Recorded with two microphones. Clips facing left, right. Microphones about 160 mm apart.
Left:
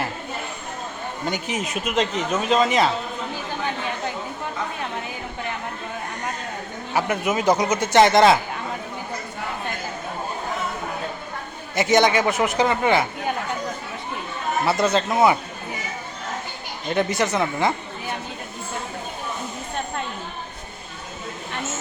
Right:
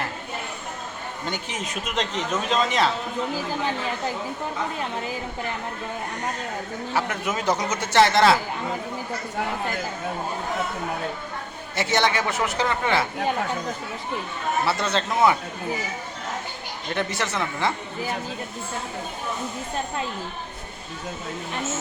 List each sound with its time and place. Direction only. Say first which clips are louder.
1.3 s speech: left 5 dB; 10° left (ahead or behind)
6.9 s speech: left 5 dB; 10° left (ahead or behind)
11.8 s speech: left 5 dB; 15° left (ahead or behind)
14.6 s speech: left 6 dB; 15° left (ahead or behind)
16.9 s speech: left 5 dB; 15° left (ahead or behind)